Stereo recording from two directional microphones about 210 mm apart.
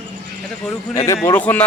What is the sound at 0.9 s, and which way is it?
Speech, 15° left (ahead or behind).